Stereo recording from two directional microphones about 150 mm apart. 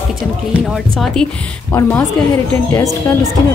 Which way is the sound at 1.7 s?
20° left (ahead or behind).